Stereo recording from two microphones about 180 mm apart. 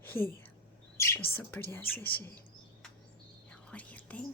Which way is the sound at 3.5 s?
5° left (ahead or behind).